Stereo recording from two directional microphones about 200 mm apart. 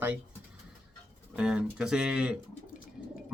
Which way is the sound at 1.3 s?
5° right (ahead or behind).